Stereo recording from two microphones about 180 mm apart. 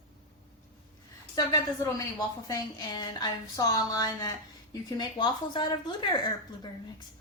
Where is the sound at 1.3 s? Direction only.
20° left (ahead or behind).